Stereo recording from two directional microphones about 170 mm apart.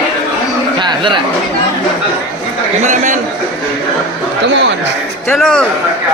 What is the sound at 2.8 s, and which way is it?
Speech, 45° right (ahead or behind).